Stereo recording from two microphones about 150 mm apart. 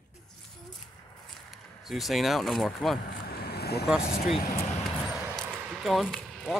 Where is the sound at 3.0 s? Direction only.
90° left.